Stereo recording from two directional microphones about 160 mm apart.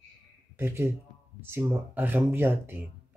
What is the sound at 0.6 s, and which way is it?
Speech, 15° right (ahead or behind).